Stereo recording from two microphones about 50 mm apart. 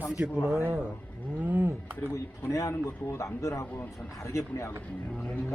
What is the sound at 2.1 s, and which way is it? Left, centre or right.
Speech, left.